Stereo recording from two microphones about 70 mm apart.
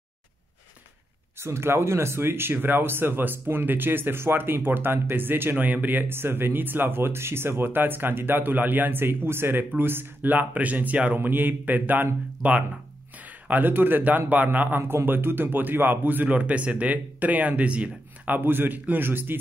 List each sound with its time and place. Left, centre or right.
1.4 s a man's voice: right
14.8 s speech: right